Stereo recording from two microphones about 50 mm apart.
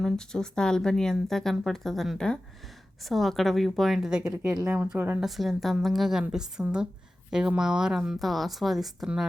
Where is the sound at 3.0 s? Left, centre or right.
Centre.